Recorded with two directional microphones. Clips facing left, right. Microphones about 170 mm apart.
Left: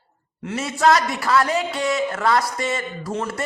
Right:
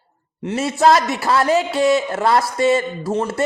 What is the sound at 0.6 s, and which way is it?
Speech, 30° right (ahead or behind).